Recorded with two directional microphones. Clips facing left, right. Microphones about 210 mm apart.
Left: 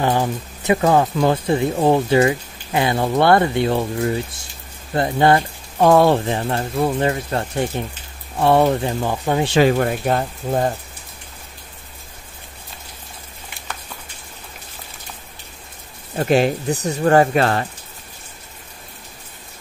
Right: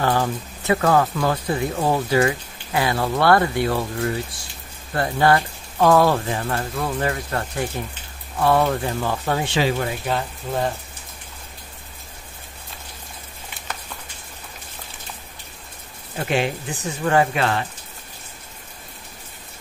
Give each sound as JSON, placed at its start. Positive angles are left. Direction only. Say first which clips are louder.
{"t": 0.0, "sound": "speech", "louder": "left 2 dB", "side_deg": 20}
{"t": 9.6, "sound": "speech", "louder": "left 6 dB", "side_deg": 50}
{"t": 16.2, "sound": "speech", "louder": "left 6 dB", "side_deg": 40}